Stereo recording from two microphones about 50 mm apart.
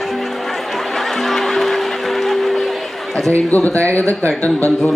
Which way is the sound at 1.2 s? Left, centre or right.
Centre.